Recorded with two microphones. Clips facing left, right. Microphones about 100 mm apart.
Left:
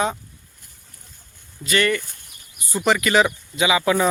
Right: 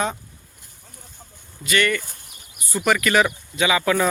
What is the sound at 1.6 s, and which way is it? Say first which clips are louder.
Speech: left 1 dB; 30° left (ahead or behind).